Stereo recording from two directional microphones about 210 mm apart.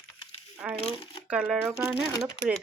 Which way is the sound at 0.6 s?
5° right (ahead or behind).